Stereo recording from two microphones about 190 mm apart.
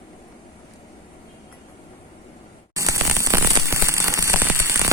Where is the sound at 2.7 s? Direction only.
15° right (ahead or behind).